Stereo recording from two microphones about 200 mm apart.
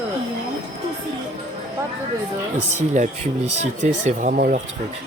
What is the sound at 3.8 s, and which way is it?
Speech, 40° right (ahead or behind).